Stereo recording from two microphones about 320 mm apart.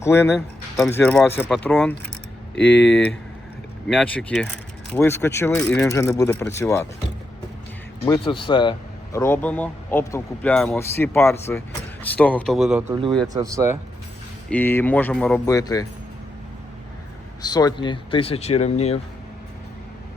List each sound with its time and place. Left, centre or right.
0.0 s speech: centre
8.0 s speech: centre
14.5 s speech: centre
17.4 s speech: centre